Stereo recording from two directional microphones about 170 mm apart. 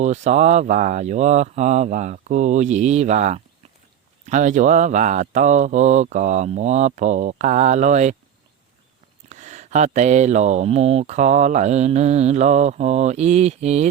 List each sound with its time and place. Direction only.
0.0 s speech: 45° right (ahead or behind)
9.3 s speech: 45° right (ahead or behind)